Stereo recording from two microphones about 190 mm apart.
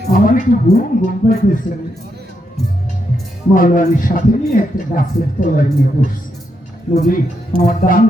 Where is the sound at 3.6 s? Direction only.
45° left (ahead or behind).